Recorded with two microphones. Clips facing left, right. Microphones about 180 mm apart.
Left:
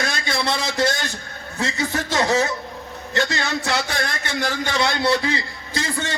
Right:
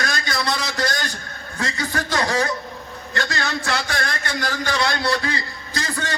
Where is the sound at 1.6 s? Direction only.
25° left (ahead or behind).